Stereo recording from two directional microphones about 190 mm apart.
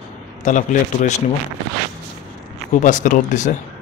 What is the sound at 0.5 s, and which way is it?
Speech, 40° left (ahead or behind).